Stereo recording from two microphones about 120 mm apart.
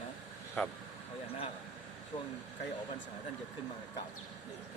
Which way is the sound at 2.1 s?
50° left (ahead or behind).